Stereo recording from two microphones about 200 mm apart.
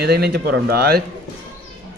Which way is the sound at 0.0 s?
50° right (ahead or behind).